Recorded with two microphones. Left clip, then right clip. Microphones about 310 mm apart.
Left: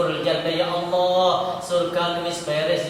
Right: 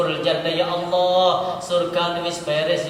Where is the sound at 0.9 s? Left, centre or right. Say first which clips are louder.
Right 2 dB; right.